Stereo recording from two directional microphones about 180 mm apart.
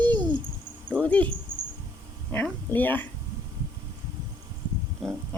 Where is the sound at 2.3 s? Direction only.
10° left (ahead or behind).